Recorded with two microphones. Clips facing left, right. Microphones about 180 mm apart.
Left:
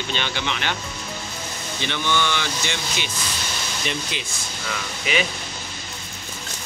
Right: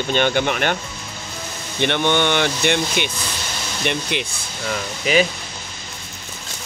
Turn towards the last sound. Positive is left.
turn(degrees=-40)  # may be behind; listen again after turning